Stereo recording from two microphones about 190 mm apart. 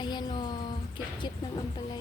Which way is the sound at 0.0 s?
20° left (ahead or behind).